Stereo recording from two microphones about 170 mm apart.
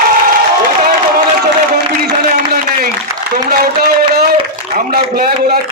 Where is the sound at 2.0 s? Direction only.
60° right (ahead or behind).